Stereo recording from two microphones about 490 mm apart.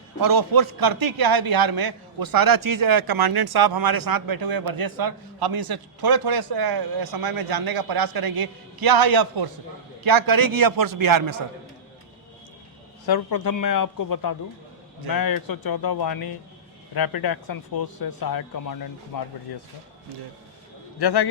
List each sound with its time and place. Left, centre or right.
0.2 s a man's voice: right
13.1 s a man's voice: left
21.0 s speech: left